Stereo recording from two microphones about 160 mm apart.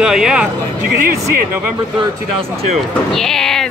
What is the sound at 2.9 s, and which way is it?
Speech, centre (ahead or behind).